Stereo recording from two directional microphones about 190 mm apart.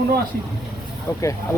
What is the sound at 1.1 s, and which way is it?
Speech, 15° left (ahead or behind).